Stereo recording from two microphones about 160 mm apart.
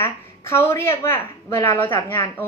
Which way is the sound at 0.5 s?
15° left (ahead or behind).